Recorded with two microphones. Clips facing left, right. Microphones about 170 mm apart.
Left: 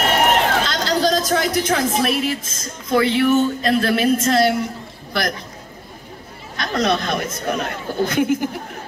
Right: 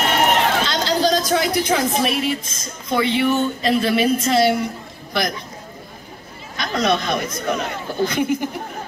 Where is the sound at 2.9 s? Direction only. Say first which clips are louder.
Left 3 dB; centre (ahead or behind).